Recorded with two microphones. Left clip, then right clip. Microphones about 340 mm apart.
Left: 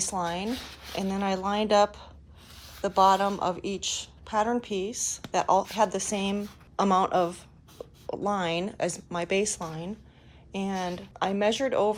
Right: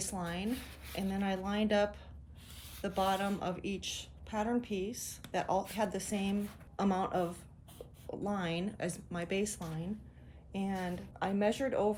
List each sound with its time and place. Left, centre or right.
0.0 s a woman's voice: centre